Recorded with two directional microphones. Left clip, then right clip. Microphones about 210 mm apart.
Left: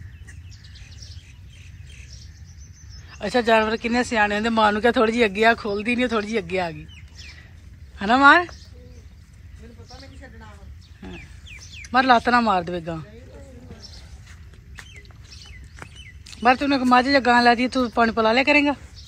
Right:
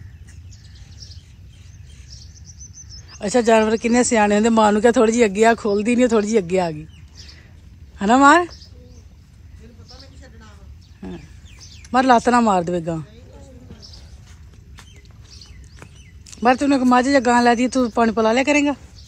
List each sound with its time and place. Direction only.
3.0 s speech: 10° right (ahead or behind)
8.0 s speech: 15° right (ahead or behind)
11.0 s bird: 15° right (ahead or behind)
11.9 s speech: 15° right (ahead or behind)
16.4 s speech: 15° right (ahead or behind)